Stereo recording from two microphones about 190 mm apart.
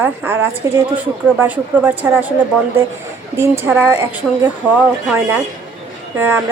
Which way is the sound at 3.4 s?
10° right (ahead or behind).